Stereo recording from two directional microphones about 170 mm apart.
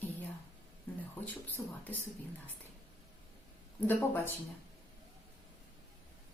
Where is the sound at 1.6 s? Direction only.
15° left (ahead or behind).